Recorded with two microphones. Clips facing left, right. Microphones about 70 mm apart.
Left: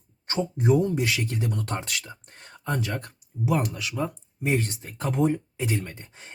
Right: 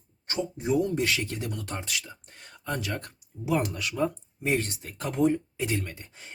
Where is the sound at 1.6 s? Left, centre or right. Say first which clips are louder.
Left 3 dB; left.